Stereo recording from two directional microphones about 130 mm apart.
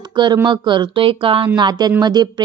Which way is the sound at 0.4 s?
35° right (ahead or behind).